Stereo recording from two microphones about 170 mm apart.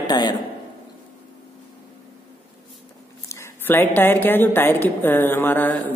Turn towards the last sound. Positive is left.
turn(degrees=10)  # may be behind; listen again after turning